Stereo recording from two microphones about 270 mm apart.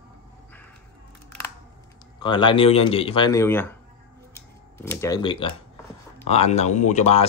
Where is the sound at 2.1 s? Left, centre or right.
Centre.